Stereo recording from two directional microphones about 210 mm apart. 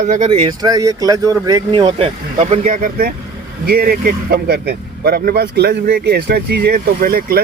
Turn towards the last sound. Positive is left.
turn(degrees=-45)  # may be behind; listen again after turning